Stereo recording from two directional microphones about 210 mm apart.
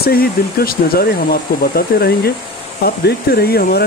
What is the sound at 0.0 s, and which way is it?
Speech, 45° left (ahead or behind).